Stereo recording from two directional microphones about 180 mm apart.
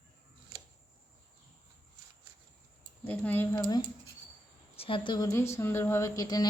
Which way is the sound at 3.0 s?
10° left (ahead or behind).